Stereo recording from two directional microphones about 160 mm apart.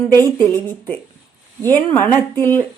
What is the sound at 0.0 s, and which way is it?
Speech, 15° left (ahead or behind).